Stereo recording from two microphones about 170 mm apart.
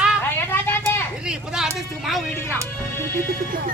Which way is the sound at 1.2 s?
5° right (ahead or behind).